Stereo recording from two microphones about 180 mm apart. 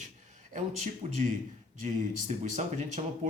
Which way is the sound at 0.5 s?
40° right (ahead or behind).